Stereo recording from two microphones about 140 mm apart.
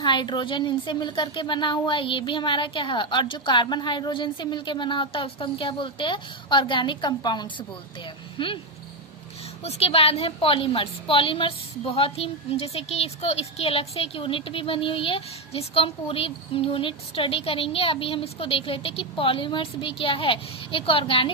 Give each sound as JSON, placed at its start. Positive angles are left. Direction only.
{"t": 0.0, "sound": "a woman's voice", "side_deg": 35}
{"t": 9.6, "sound": "a woman's voice", "side_deg": 45}